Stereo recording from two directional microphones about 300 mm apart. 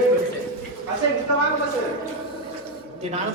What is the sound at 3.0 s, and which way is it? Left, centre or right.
Speech, right.